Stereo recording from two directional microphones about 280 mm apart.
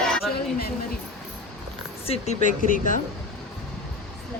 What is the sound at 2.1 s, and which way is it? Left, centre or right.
Speech, left.